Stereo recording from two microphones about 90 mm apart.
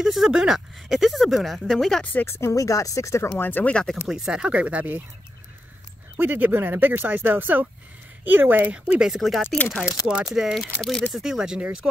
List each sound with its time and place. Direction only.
0.0 s speech: 5° right (ahead or behind)
2.1 s speech: 25° left (ahead or behind)
3.3 s speech: 20° left (ahead or behind)
4.1 s speech: 5° right (ahead or behind)
6.1 s speech: 20° right (ahead or behind); by 11.1 s 5° left (ahead or behind)
11.1 s speech: 5° right (ahead or behind)